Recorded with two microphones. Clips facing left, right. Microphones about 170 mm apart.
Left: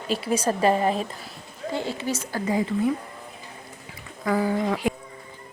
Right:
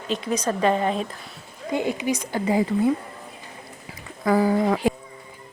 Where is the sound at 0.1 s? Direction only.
10° left (ahead or behind).